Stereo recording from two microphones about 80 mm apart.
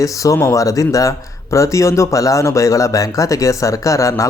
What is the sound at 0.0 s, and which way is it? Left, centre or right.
Speech, left.